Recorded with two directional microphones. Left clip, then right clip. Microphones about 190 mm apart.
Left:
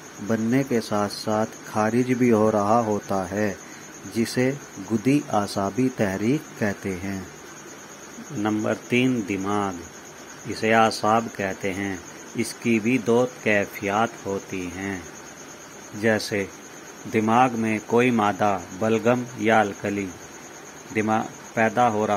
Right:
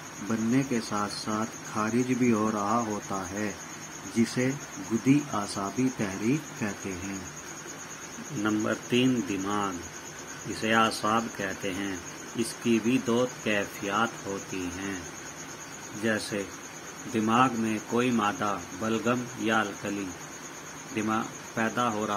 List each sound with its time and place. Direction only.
0.3 s speech: 25° left (ahead or behind)
5.0 s speech: 30° left (ahead or behind)
8.5 s speech: 20° left (ahead or behind)
16.0 s speech: 35° left (ahead or behind)
20.9 s speech: 30° left (ahead or behind)